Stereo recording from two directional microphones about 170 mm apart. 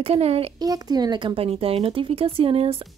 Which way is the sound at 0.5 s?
20° right (ahead or behind).